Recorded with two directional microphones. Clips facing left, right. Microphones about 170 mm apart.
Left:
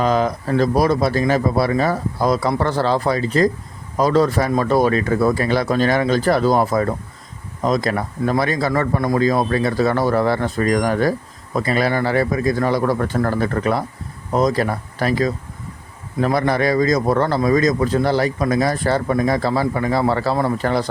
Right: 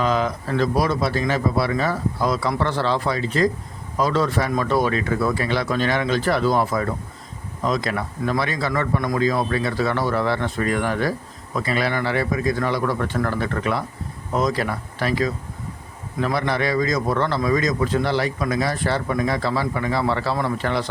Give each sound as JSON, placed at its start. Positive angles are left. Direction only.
{"t": 0.0, "sound": "a man's voice", "side_deg": 40}